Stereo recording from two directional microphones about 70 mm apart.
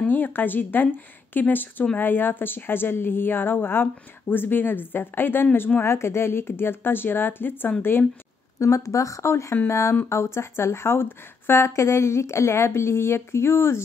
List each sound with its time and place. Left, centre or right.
0.0 s a woman's voice: left
8.5 s a woman's voice: left